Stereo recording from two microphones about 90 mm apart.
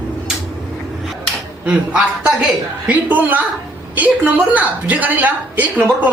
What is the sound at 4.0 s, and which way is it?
A woman's voice, 20° right (ahead or behind).